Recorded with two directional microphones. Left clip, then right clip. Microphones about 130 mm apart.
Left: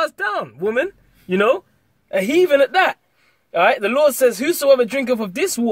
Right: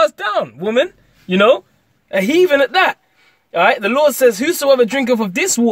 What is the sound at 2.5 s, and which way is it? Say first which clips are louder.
Speech: right 2 dB; 30° right (ahead or behind).